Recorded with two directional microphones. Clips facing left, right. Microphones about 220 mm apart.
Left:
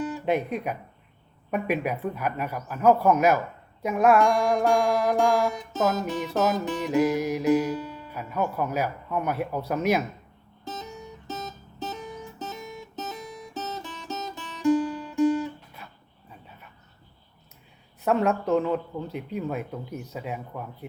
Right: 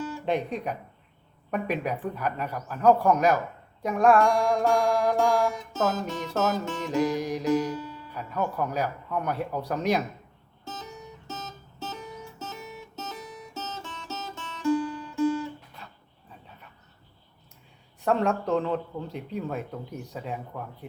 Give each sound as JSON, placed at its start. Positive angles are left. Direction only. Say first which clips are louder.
{"t": 0.3, "sound": "music", "louder": "left 1 dB", "side_deg": 5}
{"t": 8.1, "sound": "music", "louder": "left 1 dB", "side_deg": 10}
{"t": 11.3, "sound": "music", "louder": "left 5 dB", "side_deg": 15}
{"t": 18.0, "sound": "speech", "louder": "left 1 dB", "side_deg": 5}